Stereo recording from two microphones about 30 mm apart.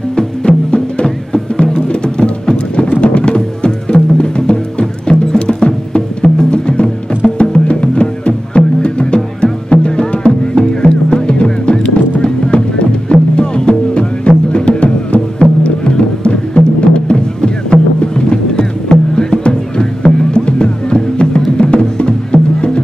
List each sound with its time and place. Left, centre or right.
0.1 s music: left